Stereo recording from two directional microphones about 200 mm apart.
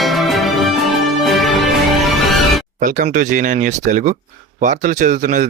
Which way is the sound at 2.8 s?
40° right (ahead or behind).